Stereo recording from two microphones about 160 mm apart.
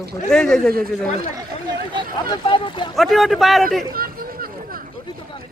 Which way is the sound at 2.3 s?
30° left (ahead or behind).